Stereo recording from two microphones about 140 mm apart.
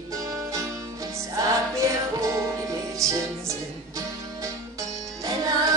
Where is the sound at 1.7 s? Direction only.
20° right (ahead or behind).